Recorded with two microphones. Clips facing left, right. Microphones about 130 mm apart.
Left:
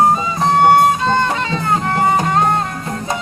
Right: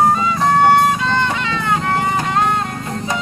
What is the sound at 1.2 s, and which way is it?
Music, 40° left (ahead or behind).